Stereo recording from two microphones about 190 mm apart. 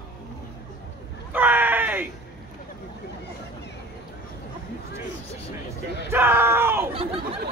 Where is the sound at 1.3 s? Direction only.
10° right (ahead or behind).